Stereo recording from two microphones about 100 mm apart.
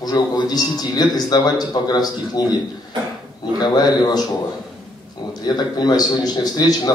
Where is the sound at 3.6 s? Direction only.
45° left (ahead or behind).